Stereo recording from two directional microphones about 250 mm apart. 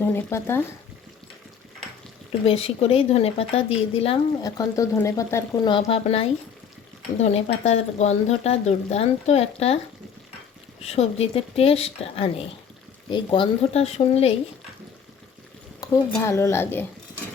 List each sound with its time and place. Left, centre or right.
0.0 s a woman's voice: centre
2.4 s speech: left
10.8 s speech: left
15.8 s a woman's voice: centre